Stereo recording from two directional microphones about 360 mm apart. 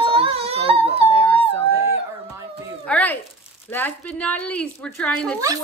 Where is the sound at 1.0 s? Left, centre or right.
Centre.